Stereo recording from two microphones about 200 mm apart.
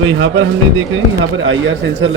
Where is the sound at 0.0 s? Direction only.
75° right (ahead or behind).